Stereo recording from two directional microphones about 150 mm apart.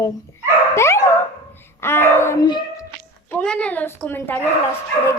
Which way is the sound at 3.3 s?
5° left (ahead or behind).